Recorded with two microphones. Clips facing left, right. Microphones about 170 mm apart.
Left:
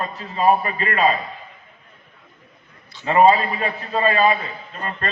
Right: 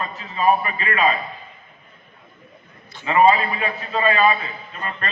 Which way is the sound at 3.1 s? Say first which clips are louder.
Left 1 dB; 40° left (ahead or behind).